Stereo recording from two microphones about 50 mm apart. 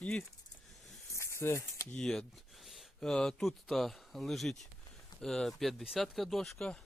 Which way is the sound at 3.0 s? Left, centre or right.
Centre.